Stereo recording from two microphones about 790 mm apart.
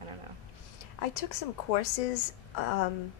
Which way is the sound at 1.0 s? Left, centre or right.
Left.